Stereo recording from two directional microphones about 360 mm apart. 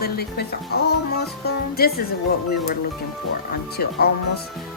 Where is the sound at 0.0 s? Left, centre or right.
Left.